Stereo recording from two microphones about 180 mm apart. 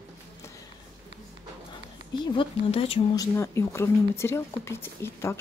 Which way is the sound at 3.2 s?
15° left (ahead or behind).